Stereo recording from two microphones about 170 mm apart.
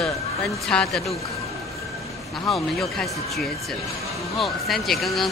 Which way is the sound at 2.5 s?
Centre (ahead or behind).